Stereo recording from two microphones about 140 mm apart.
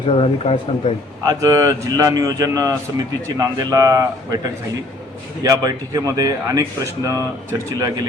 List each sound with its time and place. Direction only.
0.1 s speech: 45° left (ahead or behind)
1.2 s speech: 25° right (ahead or behind)
5.4 s speech: 25° right (ahead or behind)